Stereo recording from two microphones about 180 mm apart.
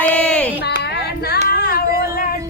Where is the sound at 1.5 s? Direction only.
55° left (ahead or behind).